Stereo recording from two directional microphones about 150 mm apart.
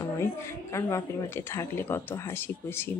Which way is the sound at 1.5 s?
15° left (ahead or behind).